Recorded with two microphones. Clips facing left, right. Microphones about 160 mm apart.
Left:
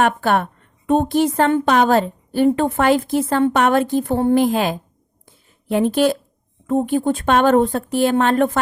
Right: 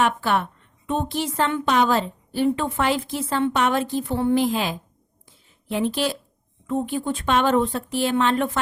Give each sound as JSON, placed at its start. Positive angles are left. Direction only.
{"t": 0.0, "sound": "speech", "side_deg": 50}
{"t": 5.2, "sound": "a sound", "side_deg": 50}
{"t": 6.7, "sound": "speech", "side_deg": 50}